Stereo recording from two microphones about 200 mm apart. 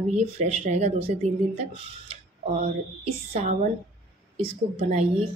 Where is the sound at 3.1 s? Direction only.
35° right (ahead or behind).